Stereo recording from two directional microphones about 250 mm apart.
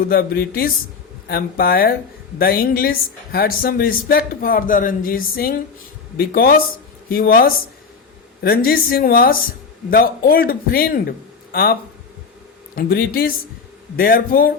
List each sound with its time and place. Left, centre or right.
0.0 s a woman's voice: left